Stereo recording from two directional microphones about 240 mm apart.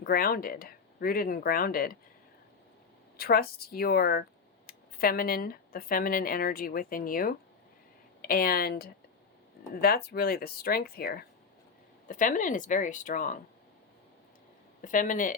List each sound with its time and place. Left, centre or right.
0.0 s speech: left
3.2 s speech: left
14.8 s speech: left